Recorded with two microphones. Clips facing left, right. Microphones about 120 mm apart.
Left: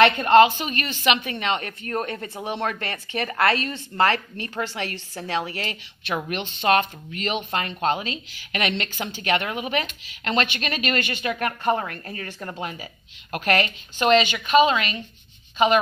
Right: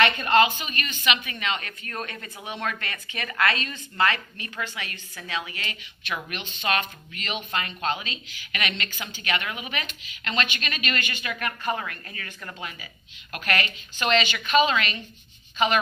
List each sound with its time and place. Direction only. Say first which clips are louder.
0.0 s speech: left 6 dB; 30° left (ahead or behind)
14.1 s a woman's voice: left 4 dB; 15° left (ahead or behind)